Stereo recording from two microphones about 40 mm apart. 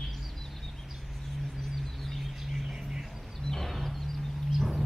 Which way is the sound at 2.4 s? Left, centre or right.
Centre.